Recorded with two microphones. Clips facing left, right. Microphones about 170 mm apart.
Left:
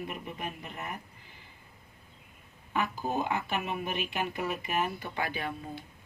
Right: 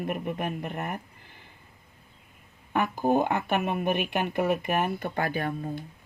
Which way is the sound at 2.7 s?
55° right (ahead or behind).